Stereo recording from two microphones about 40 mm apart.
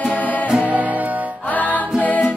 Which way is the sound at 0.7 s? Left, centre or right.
Right.